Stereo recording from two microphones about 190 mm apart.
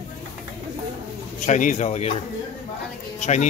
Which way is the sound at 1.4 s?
40° left (ahead or behind).